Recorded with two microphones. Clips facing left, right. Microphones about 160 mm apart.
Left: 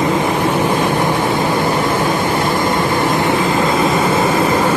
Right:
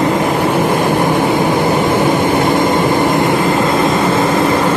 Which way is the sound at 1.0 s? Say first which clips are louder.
Right 3 dB; 15° right (ahead or behind).